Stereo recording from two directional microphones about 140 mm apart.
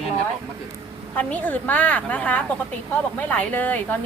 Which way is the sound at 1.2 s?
10° left (ahead or behind).